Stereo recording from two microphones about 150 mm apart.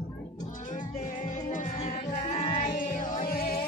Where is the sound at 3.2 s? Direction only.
80° left.